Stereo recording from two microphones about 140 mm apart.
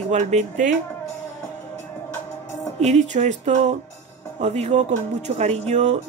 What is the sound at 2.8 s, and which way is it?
Speech, 55° right (ahead or behind).